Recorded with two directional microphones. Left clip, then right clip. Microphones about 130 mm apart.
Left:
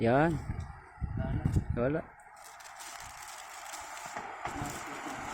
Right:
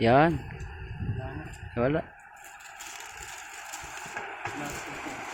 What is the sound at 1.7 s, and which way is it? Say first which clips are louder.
Speech: right 5 dB; 20° right (ahead or behind).